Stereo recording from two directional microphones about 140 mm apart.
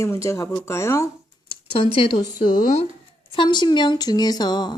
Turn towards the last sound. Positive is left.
turn(degrees=30)  # may be behind; listen again after turning